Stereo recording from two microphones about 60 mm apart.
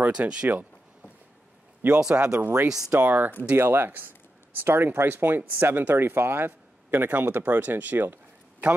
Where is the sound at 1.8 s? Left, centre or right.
Right.